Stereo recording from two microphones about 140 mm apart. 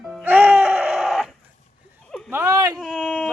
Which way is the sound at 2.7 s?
5° left (ahead or behind).